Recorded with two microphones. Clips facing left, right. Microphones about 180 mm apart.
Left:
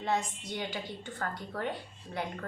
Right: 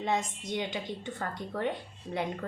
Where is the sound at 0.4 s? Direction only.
20° right (ahead or behind).